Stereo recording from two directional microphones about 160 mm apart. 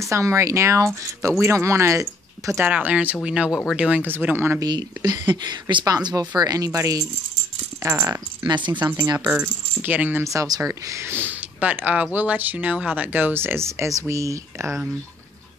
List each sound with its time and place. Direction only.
0.0 s speech: 20° right (ahead or behind)
4.6 s speech: 25° right (ahead or behind)
8.5 s speech: 30° right (ahead or behind)